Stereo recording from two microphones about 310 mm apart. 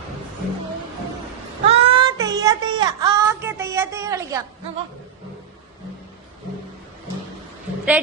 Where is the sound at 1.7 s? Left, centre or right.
Centre.